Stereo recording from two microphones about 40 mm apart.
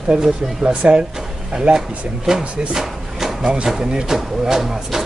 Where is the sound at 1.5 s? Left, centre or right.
Centre.